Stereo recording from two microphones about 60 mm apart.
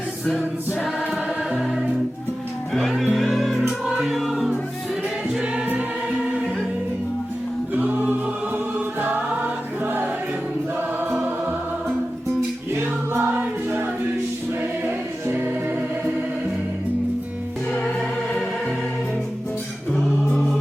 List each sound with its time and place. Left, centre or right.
2.7 s speech: centre
3.2 s music: centre
7.7 s a capella: right
8.5 s music: right
12.7 s music: right
14.8 s music: right
20.2 s music: centre